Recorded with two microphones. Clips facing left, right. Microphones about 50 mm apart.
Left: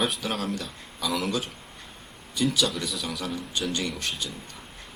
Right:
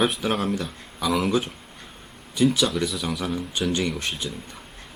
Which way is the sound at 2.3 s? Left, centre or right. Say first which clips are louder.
Right 6 dB; right.